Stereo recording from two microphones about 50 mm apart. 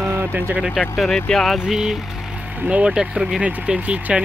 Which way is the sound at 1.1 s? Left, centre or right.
Centre.